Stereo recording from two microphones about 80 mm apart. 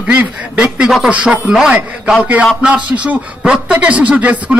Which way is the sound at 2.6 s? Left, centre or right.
Centre.